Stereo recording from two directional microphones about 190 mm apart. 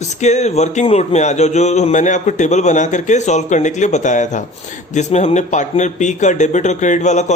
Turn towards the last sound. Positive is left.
turn(degrees=40)  # may be behind; listen again after turning